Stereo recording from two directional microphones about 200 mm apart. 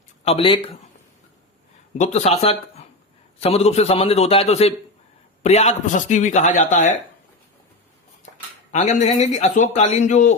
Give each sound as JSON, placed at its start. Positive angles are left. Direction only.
{"t": 0.3, "sound": "speech", "side_deg": 25}
{"t": 2.0, "sound": "a man's voice", "side_deg": 35}
{"t": 8.7, "sound": "a man's voice", "side_deg": 35}